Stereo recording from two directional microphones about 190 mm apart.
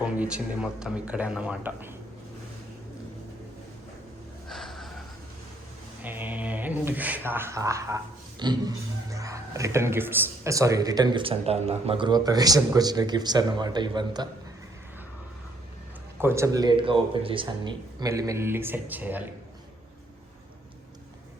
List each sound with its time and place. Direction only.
0.0 s speech: 5° right (ahead or behind)
4.4 s snort: centre (ahead or behind)
6.0 s speech: 10° right (ahead or behind)
16.1 s speech: 15° right (ahead or behind)